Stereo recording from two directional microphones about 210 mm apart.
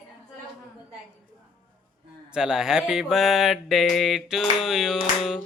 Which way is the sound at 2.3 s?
5° right (ahead or behind).